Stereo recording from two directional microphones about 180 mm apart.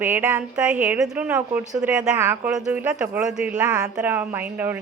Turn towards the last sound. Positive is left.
turn(degrees=-10)  # may be behind; listen again after turning